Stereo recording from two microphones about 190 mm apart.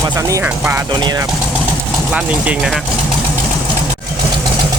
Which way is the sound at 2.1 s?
5° right (ahead or behind).